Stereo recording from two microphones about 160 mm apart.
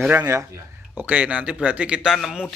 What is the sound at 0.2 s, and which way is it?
Speech, 20° right (ahead or behind).